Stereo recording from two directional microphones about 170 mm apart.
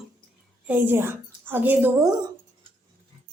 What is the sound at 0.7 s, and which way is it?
A woman's voice, 10° right (ahead or behind).